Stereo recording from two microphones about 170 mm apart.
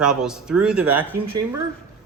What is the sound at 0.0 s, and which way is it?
Speech, 5° right (ahead or behind).